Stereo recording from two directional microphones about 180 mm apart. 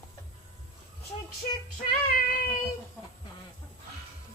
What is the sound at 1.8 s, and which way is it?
Child singing, 50° left (ahead or behind).